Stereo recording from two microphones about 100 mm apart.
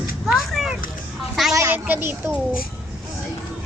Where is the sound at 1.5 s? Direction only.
30° right (ahead or behind).